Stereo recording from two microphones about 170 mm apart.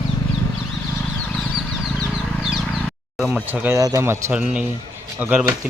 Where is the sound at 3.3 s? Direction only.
10° right (ahead or behind).